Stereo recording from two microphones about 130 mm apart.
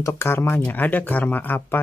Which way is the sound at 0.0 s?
20° left (ahead or behind).